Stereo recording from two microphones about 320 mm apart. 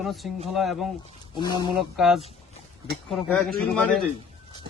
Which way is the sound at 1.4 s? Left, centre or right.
Centre.